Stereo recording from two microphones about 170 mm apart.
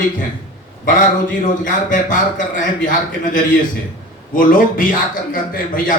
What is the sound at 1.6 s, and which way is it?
Speech, 50° left (ahead or behind).